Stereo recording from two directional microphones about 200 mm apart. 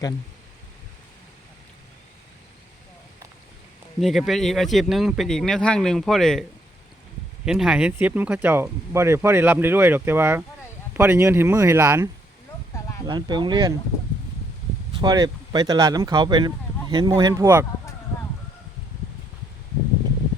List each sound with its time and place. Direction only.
4.0 s speech: centre (ahead or behind)
7.4 s speech: 5° right (ahead or behind)
13.1 s speech: 20° right (ahead or behind)
14.9 s speech: 20° right (ahead or behind)